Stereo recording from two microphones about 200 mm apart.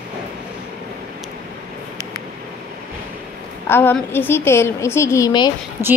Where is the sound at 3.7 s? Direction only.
10° left (ahead or behind).